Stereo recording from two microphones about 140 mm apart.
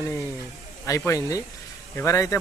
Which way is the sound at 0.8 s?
20° left (ahead or behind).